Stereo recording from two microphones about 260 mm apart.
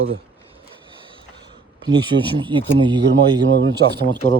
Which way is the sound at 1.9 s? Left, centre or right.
Centre.